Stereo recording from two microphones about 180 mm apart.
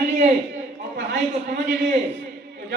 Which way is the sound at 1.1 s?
85° right.